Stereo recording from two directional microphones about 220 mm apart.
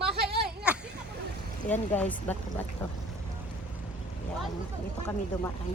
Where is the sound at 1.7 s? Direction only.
5° left (ahead or behind).